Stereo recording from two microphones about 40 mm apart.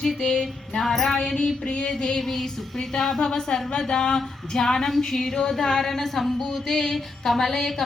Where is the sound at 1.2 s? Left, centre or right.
Centre.